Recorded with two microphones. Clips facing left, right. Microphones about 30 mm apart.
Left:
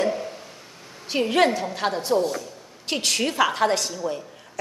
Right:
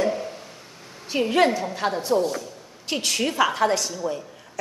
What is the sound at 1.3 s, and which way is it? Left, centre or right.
A woman's voice, left.